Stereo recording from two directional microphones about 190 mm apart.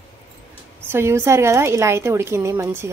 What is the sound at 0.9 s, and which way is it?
A woman's voice, 10° right (ahead or behind).